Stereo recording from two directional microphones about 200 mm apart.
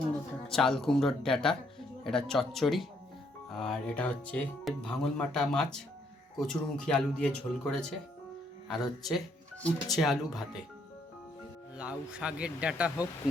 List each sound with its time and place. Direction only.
0.4 s speech: centre (ahead or behind)
11.8 s speech: 5° right (ahead or behind)